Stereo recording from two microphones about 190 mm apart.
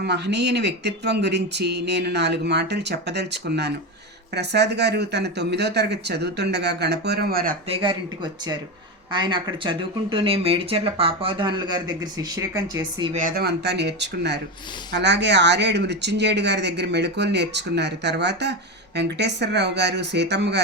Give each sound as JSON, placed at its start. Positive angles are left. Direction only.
{"t": 0.0, "sound": "speech", "side_deg": -65}
{"t": 7.7, "sound": "speech", "side_deg": -25}
{"t": 13.1, "sound": "speech", "side_deg": -50}